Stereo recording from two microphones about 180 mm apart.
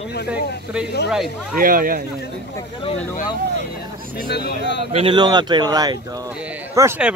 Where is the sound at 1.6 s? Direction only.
50° right (ahead or behind).